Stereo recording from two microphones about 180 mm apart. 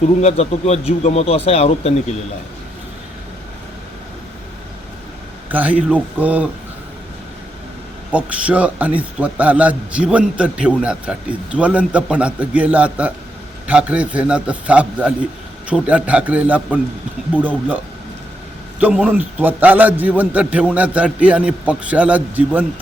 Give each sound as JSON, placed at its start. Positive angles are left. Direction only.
{"t": 0.2, "sound": "speech", "side_deg": 35}
{"t": 5.5, "sound": "a man's voice", "side_deg": -10}
{"t": 8.1, "sound": "a man's voice", "side_deg": -5}
{"t": 18.8, "sound": "a man's voice", "side_deg": -10}